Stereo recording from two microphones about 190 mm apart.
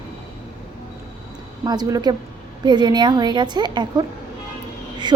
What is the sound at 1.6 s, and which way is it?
A woman's voice, 20° right (ahead or behind).